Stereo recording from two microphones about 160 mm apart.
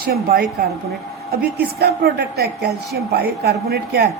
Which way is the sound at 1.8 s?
80° right.